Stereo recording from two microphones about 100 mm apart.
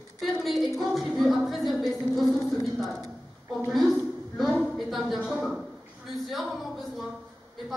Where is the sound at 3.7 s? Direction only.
Centre (ahead or behind).